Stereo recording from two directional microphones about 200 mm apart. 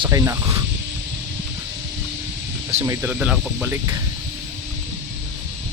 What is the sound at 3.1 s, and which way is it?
Speech, 5° right (ahead or behind).